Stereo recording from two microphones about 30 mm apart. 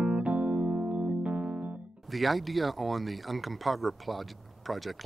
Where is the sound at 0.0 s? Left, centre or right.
Right.